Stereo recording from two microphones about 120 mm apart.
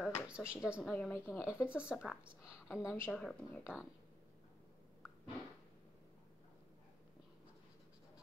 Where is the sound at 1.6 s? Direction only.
10° right (ahead or behind).